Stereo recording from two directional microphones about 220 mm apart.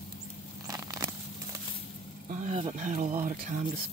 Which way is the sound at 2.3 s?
30° right (ahead or behind).